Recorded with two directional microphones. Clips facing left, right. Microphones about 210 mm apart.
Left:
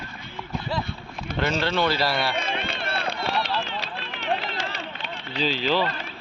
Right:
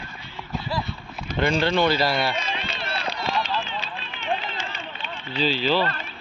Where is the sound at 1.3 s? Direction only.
55° left (ahead or behind).